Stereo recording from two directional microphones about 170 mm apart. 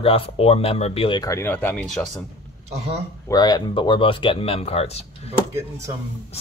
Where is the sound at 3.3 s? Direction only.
25° left (ahead or behind).